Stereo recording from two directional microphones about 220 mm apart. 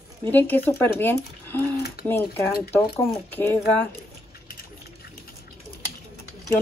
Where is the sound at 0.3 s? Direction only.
10° left (ahead or behind).